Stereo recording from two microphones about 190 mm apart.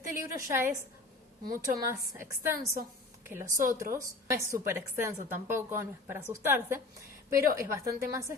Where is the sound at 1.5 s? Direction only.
45° right (ahead or behind).